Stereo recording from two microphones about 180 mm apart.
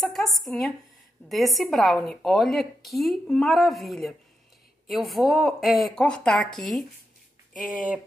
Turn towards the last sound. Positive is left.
turn(degrees=0)  # may be behind; listen again after turning